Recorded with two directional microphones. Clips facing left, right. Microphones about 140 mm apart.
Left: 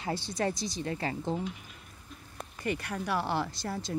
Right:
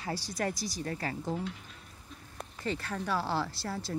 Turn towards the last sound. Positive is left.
turn(degrees=20)  # may be behind; listen again after turning